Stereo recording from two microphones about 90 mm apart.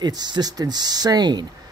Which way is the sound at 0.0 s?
50° right (ahead or behind).